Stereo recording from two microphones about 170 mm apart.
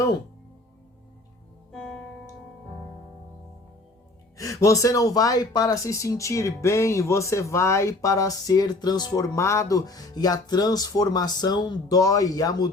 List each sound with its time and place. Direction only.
1.7 s music: 5° left (ahead or behind)
4.4 s speech: 20° left (ahead or behind)